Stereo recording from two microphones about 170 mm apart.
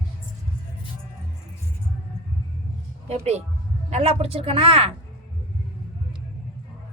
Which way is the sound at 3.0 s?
35° right (ahead or behind).